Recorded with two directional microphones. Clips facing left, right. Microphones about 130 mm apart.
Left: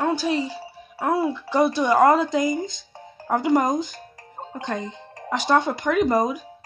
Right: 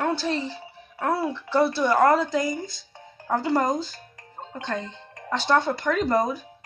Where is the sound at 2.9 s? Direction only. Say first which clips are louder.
Left 4 dB; 35° left (ahead or behind).